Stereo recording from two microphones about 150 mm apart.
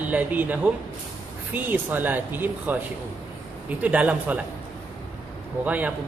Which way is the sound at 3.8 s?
10° right (ahead or behind).